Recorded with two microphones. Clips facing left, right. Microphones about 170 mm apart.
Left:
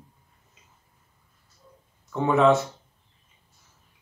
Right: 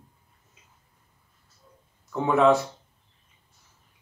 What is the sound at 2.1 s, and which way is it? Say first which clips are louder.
Speech: even; centre (ahead or behind).